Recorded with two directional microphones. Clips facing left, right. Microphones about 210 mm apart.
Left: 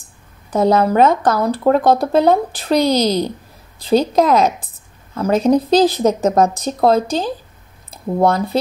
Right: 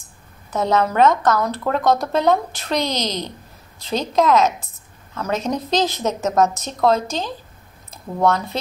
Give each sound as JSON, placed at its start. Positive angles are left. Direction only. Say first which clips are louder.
{"t": 0.5, "sound": "speech", "louder": "left 5 dB", "side_deg": 35}
{"t": 3.1, "sound": "a woman's voice", "louder": "left 9 dB", "side_deg": 10}
{"t": 3.9, "sound": "speech", "louder": "left 4 dB", "side_deg": 35}